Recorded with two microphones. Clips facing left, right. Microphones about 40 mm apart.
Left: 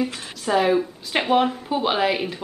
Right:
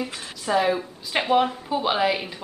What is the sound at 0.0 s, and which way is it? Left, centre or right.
Speech, centre.